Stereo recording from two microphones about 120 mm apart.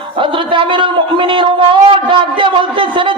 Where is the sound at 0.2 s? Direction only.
45° right (ahead or behind).